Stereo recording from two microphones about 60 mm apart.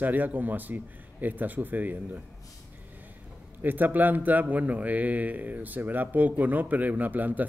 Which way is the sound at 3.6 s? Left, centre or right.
Right.